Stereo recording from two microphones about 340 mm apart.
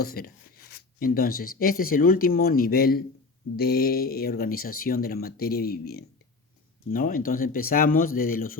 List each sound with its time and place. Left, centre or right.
0.0 s speech: left